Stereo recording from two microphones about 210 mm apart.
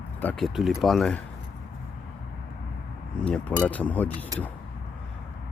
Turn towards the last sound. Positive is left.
turn(degrees=5)  # may be behind; listen again after turning